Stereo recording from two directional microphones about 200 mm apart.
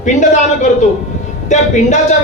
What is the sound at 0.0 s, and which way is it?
A man's voice, 35° left (ahead or behind).